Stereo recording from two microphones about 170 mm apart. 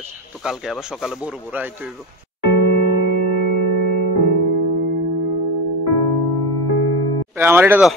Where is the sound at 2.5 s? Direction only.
80° left.